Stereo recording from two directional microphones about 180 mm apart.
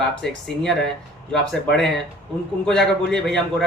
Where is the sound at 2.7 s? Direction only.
5° left (ahead or behind).